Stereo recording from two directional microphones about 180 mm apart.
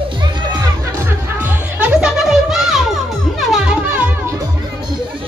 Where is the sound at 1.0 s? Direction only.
10° right (ahead or behind).